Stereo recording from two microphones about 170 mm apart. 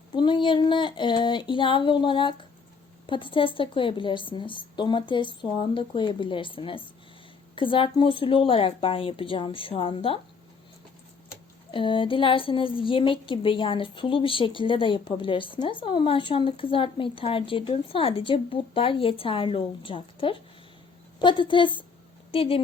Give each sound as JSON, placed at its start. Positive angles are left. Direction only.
{"t": 0.1, "sound": "a woman's voice", "side_deg": 30}
{"t": 11.7, "sound": "a woman's voice", "side_deg": 30}